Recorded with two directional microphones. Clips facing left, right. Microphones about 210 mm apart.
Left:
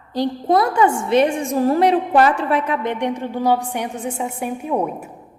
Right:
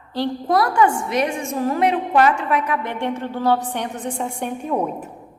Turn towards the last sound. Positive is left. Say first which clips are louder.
# left 1 dB
turn(degrees=10)  # may be behind; listen again after turning